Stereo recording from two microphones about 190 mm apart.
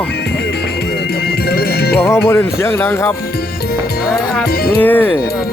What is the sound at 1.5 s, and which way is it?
Music, 55° left (ahead or behind).